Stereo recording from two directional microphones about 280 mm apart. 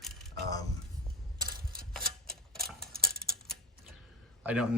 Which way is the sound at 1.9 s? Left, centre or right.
Centre.